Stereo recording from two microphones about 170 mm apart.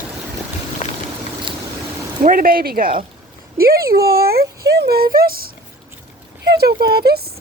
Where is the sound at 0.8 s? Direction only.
45° left (ahead or behind).